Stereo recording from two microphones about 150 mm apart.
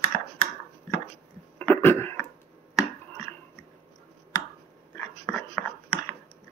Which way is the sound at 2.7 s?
20° left (ahead or behind).